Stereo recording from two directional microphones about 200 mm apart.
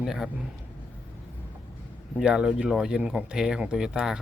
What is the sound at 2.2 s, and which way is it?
Speech, centre (ahead or behind).